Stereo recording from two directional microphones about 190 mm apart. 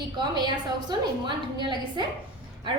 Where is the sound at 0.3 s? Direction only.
25° right (ahead or behind).